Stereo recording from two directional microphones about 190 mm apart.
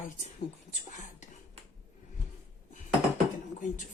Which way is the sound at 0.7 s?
40° left (ahead or behind).